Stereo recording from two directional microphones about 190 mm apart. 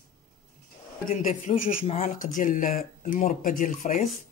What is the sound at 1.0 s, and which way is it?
Speech, 40° left (ahead or behind).